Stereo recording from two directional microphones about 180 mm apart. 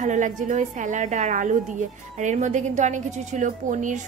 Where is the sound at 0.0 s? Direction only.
45° right (ahead or behind).